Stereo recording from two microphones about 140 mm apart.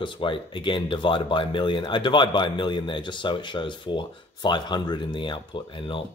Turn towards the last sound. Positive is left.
turn(degrees=35)  # may be behind; listen again after turning